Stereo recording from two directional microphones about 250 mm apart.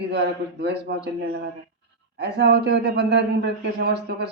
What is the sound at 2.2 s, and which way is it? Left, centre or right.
Speech, right.